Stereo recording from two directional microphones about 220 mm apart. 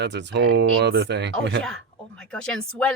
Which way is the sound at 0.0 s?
55° right (ahead or behind).